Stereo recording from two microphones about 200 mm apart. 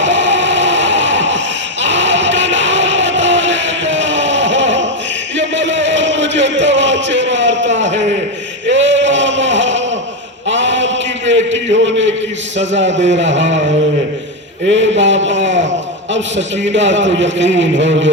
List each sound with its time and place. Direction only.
0.0 s music: 65° right (ahead or behind)
8.6 s male singing: 65° right (ahead or behind)
10.5 s a sound: 65° right (ahead or behind)
12.5 s a man's voice: 65° right (ahead or behind)
14.7 s a man's voice: 65° right (ahead or behind)
16.7 s a man's voice: 65° right (ahead or behind)